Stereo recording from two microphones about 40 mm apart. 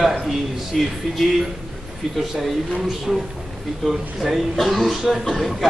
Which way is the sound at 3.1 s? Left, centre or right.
Centre.